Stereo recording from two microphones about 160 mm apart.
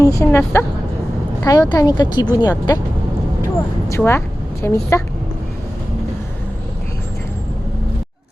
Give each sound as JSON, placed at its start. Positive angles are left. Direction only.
{"t": 0.0, "sound": "speech", "side_deg": 20}
{"t": 3.8, "sound": "speech", "side_deg": 15}